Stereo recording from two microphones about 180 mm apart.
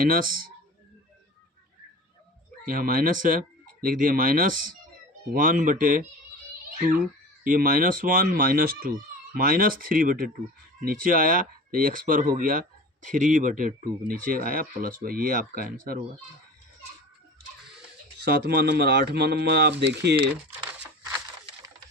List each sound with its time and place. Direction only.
0.0 s speech: 50° right (ahead or behind)
2.6 s speech: 50° right (ahead or behind)
18.4 s speech: 65° right (ahead or behind)
20.7 s a sound: 10° right (ahead or behind)